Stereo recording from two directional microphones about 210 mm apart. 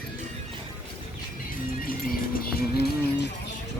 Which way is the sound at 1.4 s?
45° left (ahead or behind).